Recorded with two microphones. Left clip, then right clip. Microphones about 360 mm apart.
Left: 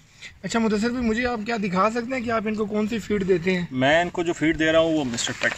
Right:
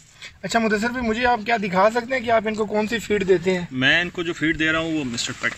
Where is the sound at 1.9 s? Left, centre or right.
Right.